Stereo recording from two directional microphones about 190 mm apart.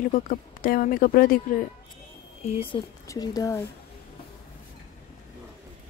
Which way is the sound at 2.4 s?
30° left (ahead or behind).